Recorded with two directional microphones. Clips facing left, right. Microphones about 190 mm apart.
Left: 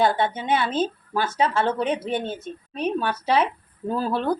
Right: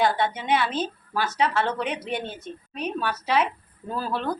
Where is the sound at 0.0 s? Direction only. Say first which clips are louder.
Left 2 dB; 25° left (ahead or behind).